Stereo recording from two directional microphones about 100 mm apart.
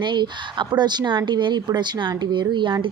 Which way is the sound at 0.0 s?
50° right (ahead or behind).